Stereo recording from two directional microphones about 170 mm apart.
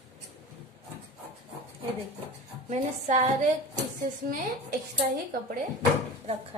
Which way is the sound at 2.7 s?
40° right (ahead or behind).